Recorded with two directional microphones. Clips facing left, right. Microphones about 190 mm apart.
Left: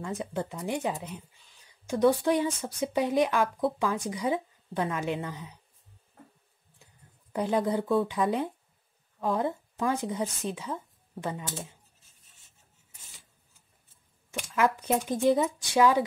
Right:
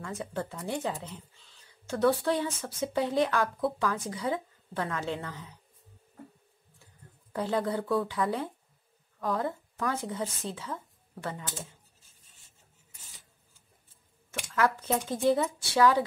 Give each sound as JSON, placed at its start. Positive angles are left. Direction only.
{"t": 0.0, "sound": "speech", "side_deg": 20}
{"t": 7.3, "sound": "speech", "side_deg": 15}
{"t": 14.5, "sound": "speech", "side_deg": 15}